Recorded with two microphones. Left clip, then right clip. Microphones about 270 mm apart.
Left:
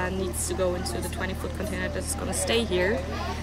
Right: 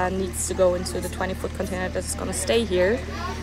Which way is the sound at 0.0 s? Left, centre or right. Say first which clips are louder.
Right 4 dB; centre.